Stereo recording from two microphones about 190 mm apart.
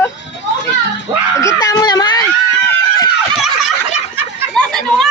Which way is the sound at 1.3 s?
15° left (ahead or behind).